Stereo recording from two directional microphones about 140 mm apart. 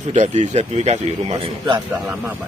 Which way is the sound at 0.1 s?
60° right (ahead or behind).